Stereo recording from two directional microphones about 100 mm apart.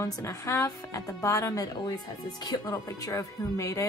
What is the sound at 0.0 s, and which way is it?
A woman's voice, 35° left (ahead or behind).